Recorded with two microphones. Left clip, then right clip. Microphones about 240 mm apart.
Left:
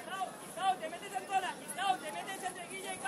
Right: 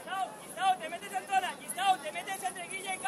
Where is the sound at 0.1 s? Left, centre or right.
Right.